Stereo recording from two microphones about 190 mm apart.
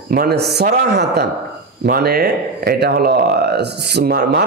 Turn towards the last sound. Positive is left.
turn(degrees=-55)  # may be behind; listen again after turning